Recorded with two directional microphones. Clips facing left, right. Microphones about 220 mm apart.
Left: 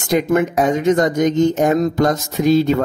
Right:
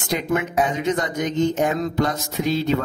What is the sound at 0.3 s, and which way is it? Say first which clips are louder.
Speech: left 4 dB; 45° left (ahead or behind).